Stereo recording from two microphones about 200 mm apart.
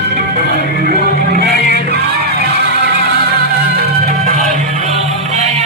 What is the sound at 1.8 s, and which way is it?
Music, 55° right (ahead or behind).